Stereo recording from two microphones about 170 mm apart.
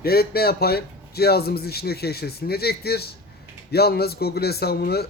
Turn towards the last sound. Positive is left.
turn(degrees=70)  # may be behind; listen again after turning